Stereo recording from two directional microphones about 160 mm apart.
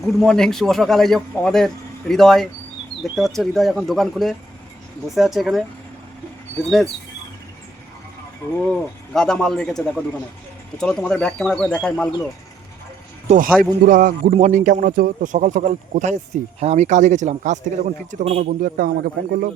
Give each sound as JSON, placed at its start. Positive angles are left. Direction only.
{"t": 0.0, "sound": "a man's voice", "side_deg": 5}
{"t": 9.1, "sound": "a man's voice", "side_deg": 5}
{"t": 13.2, "sound": "speech", "side_deg": -55}
{"t": 14.3, "sound": "speech", "side_deg": -45}